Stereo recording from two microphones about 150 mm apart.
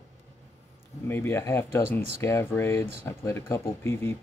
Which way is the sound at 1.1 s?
15° left (ahead or behind).